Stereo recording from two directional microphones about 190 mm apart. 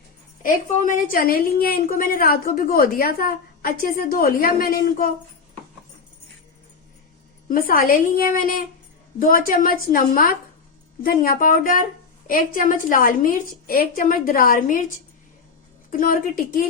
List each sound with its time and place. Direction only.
0.4 s a woman's voice: 45° left (ahead or behind)
7.4 s a woman's voice: 50° left (ahead or behind)
15.9 s a woman's voice: 45° left (ahead or behind)